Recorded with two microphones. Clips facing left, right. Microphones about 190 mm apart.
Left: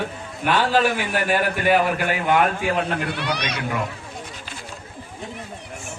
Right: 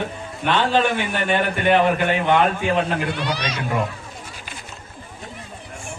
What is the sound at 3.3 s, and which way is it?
Speech, 65° left (ahead or behind).